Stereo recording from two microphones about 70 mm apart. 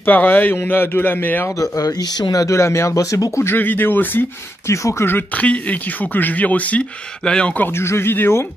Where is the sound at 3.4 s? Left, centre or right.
Left.